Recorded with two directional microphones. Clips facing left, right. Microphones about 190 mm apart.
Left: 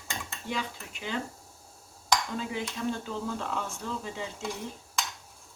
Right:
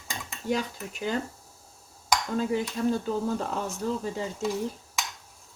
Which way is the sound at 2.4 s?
40° right (ahead or behind).